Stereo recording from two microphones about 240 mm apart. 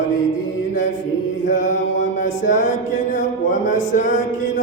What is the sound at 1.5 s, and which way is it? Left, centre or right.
Mantra, left.